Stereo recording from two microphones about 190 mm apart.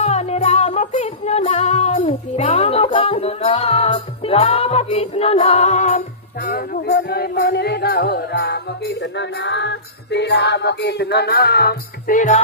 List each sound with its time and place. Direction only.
0.0 s music: 35° left (ahead or behind)
6.9 s music: 60° left (ahead or behind)
9.4 s music: 70° left (ahead or behind); by 12.4 s 45° left (ahead or behind)